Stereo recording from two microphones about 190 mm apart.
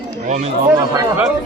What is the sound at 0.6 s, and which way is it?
Speech, 10° right (ahead or behind).